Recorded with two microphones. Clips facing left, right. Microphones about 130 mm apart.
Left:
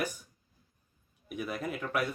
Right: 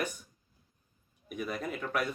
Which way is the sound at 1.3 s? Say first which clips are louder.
Even; 5° left (ahead or behind).